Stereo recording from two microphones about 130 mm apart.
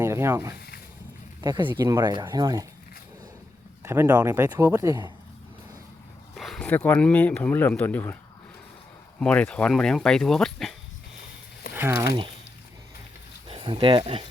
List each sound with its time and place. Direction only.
0.0 s speech: 20° right (ahead or behind)
1.4 s speech: 35° right (ahead or behind)
3.8 s speech: 15° right (ahead or behind)
4.9 s speech: 35° right (ahead or behind)
6.3 s a sound: centre (ahead or behind)
6.7 s speech: 15° left (ahead or behind)
9.2 s speech: 10° left (ahead or behind)
11.8 s speech: 15° right (ahead or behind)
13.5 s speech: 40° right (ahead or behind)